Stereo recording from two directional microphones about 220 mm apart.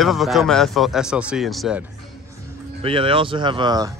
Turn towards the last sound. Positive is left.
turn(degrees=-20)  # may be behind; listen again after turning